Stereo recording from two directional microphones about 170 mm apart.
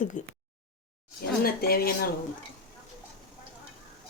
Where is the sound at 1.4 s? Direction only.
65° left (ahead or behind).